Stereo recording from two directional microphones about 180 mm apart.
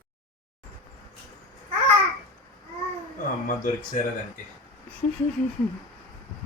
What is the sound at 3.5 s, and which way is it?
Speech, 50° left (ahead or behind).